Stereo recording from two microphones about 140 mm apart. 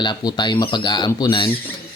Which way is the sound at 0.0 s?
30° left (ahead or behind).